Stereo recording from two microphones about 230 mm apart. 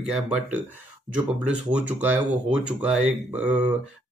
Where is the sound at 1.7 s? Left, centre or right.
Centre.